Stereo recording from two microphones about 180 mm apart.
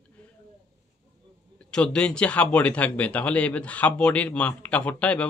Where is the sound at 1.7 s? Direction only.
5° left (ahead or behind).